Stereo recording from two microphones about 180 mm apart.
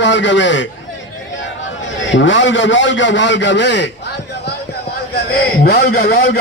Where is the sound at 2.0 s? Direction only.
90° left.